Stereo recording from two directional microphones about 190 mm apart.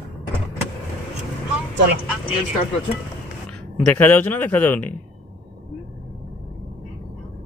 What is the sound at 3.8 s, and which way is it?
Speech, 10° left (ahead or behind).